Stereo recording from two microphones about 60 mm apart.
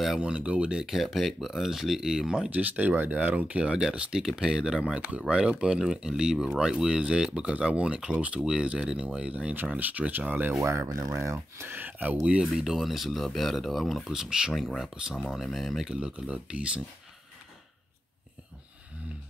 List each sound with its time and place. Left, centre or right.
0.2 s speech: centre
0.8 s speech: centre
2.5 s speech: right
10.6 s speech: right
11.8 s speech: right
12.5 s speech: centre
15.9 s speech: centre